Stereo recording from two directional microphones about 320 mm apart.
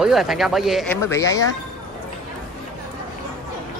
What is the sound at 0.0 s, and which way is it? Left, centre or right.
Speech, centre.